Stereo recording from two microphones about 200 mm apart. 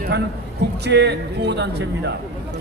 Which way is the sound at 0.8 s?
60° right (ahead or behind).